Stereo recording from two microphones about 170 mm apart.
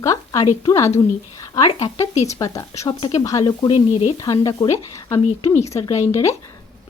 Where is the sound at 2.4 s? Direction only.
20° left (ahead or behind).